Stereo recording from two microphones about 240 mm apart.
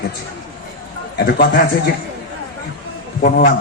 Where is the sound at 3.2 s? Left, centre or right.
Left.